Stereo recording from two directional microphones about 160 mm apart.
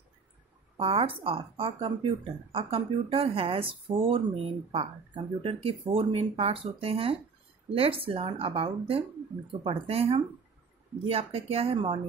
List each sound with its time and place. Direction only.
0.7 s speech: 35° right (ahead or behind)